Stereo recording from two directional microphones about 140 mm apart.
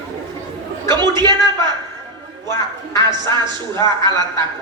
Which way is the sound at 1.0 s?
30° right (ahead or behind).